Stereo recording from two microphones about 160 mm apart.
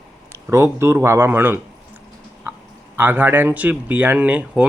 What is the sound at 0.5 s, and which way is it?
Speech, 15° right (ahead or behind).